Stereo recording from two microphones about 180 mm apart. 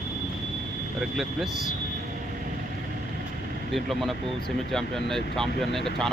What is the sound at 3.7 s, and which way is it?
Speech, centre (ahead or behind).